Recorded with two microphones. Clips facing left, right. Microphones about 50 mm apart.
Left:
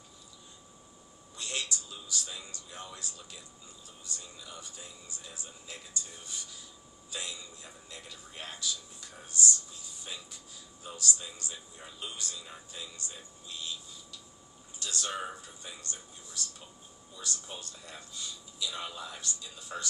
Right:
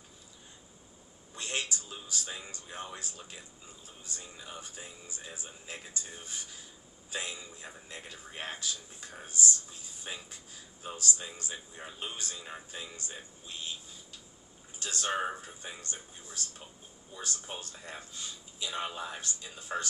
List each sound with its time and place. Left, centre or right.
1.4 s a sound: right
2.4 s a man's voice: right
9.3 s speech: left
9.6 s a man's voice: right